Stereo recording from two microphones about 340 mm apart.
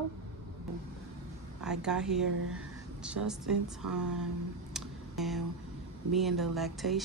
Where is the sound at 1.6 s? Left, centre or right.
Centre.